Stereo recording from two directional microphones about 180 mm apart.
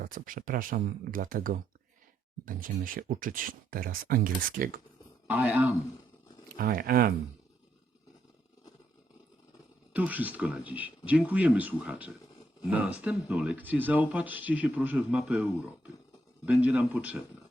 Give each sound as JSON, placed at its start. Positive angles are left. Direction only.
{"t": 0.0, "sound": "speech", "side_deg": -50}
{"t": 5.3, "sound": "speech", "side_deg": -10}
{"t": 6.6, "sound": "speech", "side_deg": -55}
{"t": 9.9, "sound": "speech", "side_deg": -10}
{"t": 16.5, "sound": "speech", "side_deg": -10}